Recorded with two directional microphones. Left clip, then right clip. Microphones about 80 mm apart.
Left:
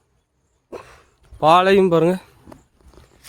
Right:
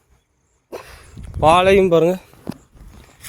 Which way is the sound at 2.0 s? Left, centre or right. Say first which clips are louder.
Right 2 dB; left.